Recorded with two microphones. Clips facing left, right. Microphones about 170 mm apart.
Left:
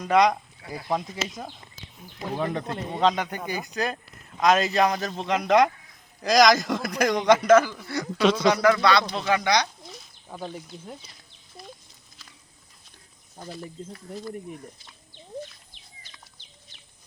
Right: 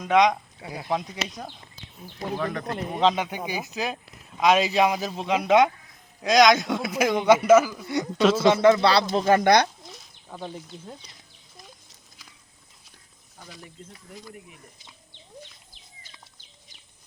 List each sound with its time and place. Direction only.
0.0 s speech: centre (ahead or behind)
2.3 s speech: 25° left (ahead or behind)
3.0 s speech: centre (ahead or behind)
7.9 s speech: 15° right (ahead or behind)
8.2 s speech: 5° right (ahead or behind)
8.4 s speech: 25° right (ahead or behind)
9.0 s speech: 45° right (ahead or behind)
9.8 s a sound: 5° left (ahead or behind)
13.8 s speech: 30° left (ahead or behind)